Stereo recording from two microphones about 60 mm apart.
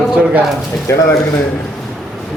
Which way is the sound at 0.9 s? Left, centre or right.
Left.